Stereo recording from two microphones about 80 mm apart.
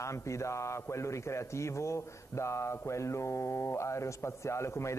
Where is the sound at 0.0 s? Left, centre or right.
Left.